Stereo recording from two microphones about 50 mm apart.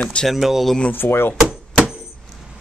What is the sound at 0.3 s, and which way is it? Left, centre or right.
Speech, centre.